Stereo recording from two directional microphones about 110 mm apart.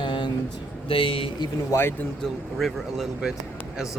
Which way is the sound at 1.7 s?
20° left (ahead or behind).